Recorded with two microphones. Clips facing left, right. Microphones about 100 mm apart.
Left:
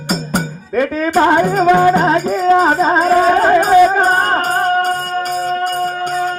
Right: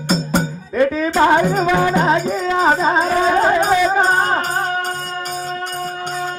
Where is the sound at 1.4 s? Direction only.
45° left (ahead or behind).